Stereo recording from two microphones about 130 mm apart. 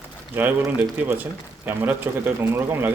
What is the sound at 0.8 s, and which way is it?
Speech, 15° right (ahead or behind).